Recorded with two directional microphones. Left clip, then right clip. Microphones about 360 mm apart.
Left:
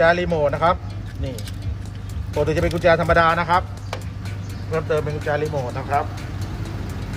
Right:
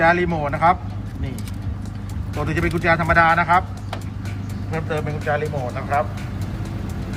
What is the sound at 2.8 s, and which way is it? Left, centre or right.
Speech, centre.